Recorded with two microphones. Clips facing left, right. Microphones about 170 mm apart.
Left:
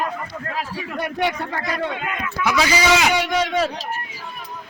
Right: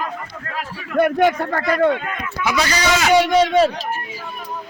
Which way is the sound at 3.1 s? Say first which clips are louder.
Right 7 dB; 35° right (ahead or behind).